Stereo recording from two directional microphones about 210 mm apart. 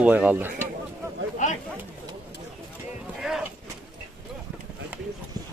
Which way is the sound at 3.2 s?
Centre (ahead or behind).